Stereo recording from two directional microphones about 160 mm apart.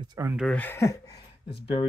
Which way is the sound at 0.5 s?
15° left (ahead or behind).